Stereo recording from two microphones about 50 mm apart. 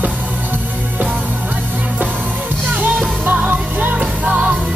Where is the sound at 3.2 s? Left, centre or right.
Right.